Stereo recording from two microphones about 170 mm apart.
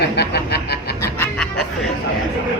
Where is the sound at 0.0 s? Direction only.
75° left (ahead or behind).